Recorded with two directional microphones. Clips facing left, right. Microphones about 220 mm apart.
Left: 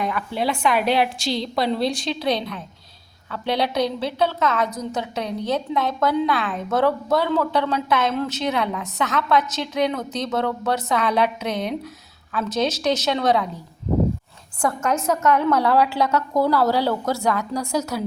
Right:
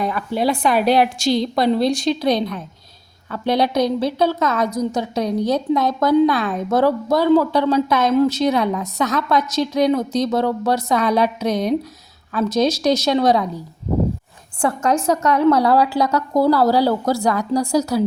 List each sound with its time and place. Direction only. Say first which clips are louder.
0.0 s a woman's voice: right 4 dB; 35° right (ahead or behind)
14.6 s a woman's voice: right 4 dB; 30° right (ahead or behind)